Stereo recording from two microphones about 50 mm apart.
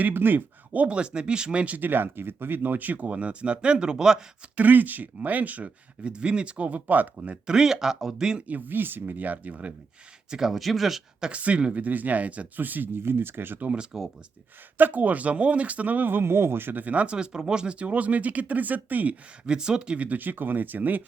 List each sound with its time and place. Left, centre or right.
0.0 s speech: right
1.9 s speech: right; by 4.2 s centre
4.5 s speech: right
7.4 s speech: centre
8.4 s speech: right
10.2 s speech: centre
11.2 s speech: right
13.0 s speech: right
13.9 s speech: centre
14.8 s speech: right
16.8 s speech: right
19.5 s speech: centre
20.1 s speech: right